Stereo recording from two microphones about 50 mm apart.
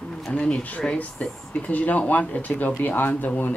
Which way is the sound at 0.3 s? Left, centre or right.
Left.